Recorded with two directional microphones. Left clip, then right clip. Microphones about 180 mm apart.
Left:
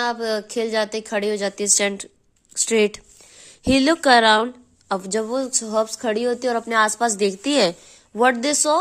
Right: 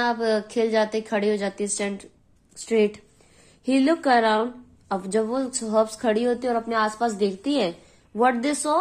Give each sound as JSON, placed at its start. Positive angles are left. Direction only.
{"t": 0.0, "sound": "a woman's voice", "side_deg": 25}
{"t": 6.5, "sound": "a woman's voice", "side_deg": 45}